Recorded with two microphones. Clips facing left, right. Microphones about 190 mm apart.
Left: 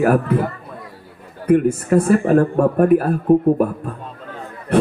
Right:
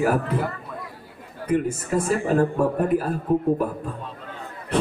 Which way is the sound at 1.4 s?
60° left (ahead or behind).